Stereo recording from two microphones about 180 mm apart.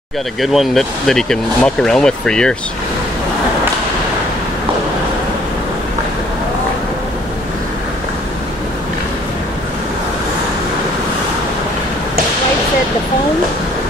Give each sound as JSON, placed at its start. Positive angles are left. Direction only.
{"t": 0.4, "sound": "speech", "side_deg": 0}